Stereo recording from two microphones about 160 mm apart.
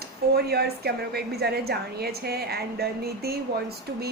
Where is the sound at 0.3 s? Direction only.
85° right.